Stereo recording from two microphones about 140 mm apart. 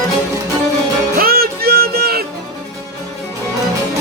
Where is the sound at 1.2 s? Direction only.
90° right.